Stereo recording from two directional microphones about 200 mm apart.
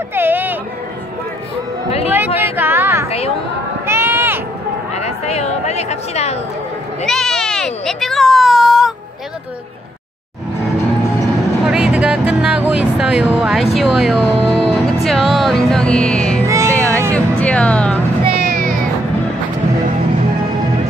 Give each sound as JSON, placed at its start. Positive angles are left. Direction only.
{"t": 0.1, "sound": "a sound", "side_deg": -10}
{"t": 2.0, "sound": "a sound", "side_deg": -10}
{"t": 3.8, "sound": "run", "side_deg": -10}
{"t": 4.9, "sound": "a sound", "side_deg": 30}
{"t": 7.1, "sound": "speech", "side_deg": 0}
{"t": 11.6, "sound": "speech", "side_deg": -5}
{"t": 16.4, "sound": "music", "side_deg": -15}
{"t": 17.1, "sound": "music", "side_deg": 5}
{"t": 18.2, "sound": "music", "side_deg": -50}